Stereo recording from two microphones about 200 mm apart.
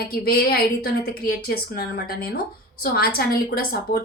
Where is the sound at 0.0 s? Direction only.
50° left (ahead or behind).